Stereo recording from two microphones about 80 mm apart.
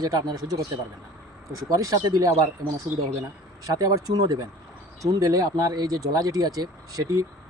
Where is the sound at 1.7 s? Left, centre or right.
Right.